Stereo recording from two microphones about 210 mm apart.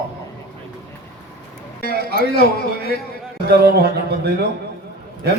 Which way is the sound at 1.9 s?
45° right (ahead or behind).